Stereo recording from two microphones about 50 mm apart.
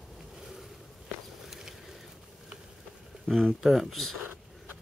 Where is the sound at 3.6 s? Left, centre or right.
Centre.